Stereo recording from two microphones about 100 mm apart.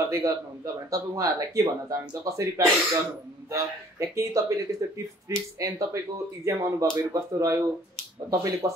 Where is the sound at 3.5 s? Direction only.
30° right (ahead or behind).